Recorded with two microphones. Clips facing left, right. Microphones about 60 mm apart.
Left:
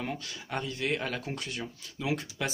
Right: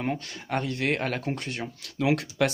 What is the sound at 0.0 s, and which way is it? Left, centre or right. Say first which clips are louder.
Speech: right 6 dB; right.